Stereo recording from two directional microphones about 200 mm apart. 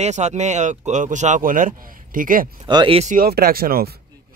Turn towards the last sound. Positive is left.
turn(degrees=-50)  # may be behind; listen again after turning